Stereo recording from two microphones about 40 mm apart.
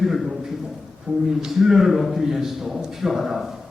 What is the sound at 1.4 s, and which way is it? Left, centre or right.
A man's voice, centre.